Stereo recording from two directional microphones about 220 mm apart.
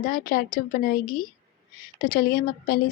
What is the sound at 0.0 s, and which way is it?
A woman's voice, 40° left (ahead or behind).